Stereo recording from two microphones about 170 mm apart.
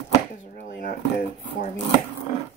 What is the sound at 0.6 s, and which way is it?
Speech, 60° left (ahead or behind).